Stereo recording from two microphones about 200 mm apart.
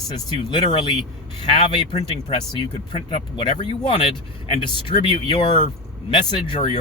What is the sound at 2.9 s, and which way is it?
Speech, 25° left (ahead or behind).